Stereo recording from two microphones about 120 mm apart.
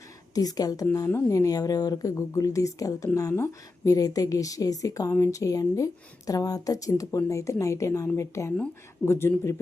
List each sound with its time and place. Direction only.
0.3 s a woman's voice: 30° left (ahead or behind)